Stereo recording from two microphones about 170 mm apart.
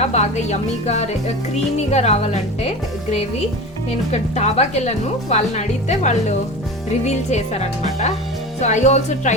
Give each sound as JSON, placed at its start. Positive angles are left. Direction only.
{"t": 0.0, "sound": "speech", "side_deg": 40}
{"t": 4.1, "sound": "speech", "side_deg": 40}